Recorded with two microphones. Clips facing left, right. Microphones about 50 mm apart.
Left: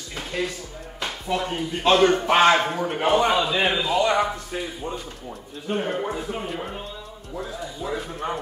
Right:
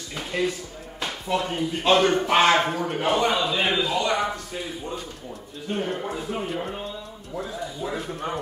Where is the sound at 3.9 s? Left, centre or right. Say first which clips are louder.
Left 3 dB; centre.